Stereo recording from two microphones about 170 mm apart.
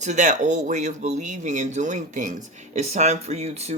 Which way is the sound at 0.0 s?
45° right (ahead or behind).